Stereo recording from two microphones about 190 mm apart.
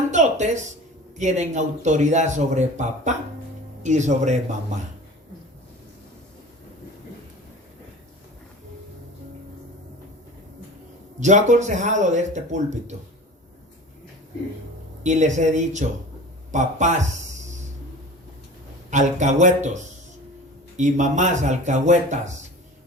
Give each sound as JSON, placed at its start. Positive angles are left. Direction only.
{"t": 0.1, "sound": "speech", "side_deg": -40}
{"t": 11.2, "sound": "speech", "side_deg": -40}
{"t": 15.0, "sound": "speech", "side_deg": -40}
{"t": 18.9, "sound": "speech", "side_deg": -40}